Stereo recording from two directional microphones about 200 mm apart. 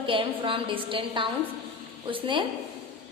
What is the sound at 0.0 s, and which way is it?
A woman's voice, 25° right (ahead or behind).